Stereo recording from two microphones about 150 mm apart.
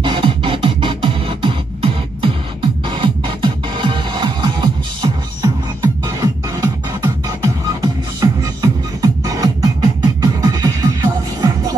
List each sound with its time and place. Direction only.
0.0 s music: 35° right (ahead or behind)